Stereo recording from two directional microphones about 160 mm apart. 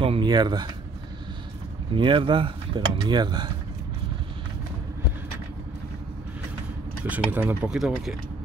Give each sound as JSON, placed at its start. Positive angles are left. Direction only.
{"t": 0.0, "sound": "a sound", "side_deg": -30}
{"t": 2.0, "sound": "speech", "side_deg": -30}
{"t": 7.1, "sound": "speech", "side_deg": -10}